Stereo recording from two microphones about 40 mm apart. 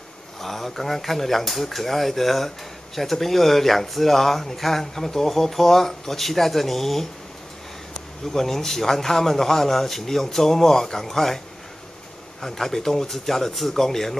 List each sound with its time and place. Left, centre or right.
0.4 s speech: centre